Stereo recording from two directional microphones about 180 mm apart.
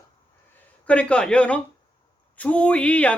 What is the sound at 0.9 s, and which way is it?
Speech, 5° left (ahead or behind).